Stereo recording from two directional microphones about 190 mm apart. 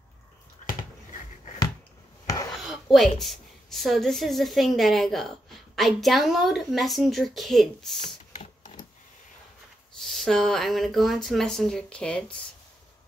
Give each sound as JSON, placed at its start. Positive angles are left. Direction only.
{"t": 0.6, "sound": "a sound", "side_deg": 40}
{"t": 2.6, "sound": "a woman's voice", "side_deg": 0}
{"t": 9.9, "sound": "a woman's voice", "side_deg": 0}